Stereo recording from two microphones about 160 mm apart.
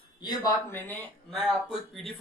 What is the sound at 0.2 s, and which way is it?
Speech, 25° left (ahead or behind).